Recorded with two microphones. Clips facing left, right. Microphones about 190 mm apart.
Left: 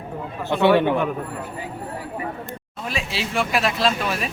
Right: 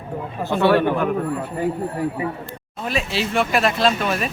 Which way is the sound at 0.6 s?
20° left (ahead or behind).